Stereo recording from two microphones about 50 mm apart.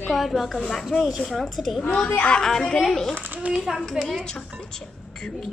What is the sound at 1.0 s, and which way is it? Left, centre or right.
Speech, centre.